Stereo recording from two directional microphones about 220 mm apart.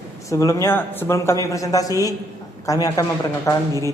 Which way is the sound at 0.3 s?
15° left (ahead or behind).